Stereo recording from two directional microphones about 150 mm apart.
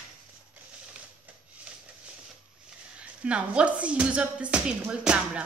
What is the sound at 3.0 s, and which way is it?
A woman's voice, 10° right (ahead or behind).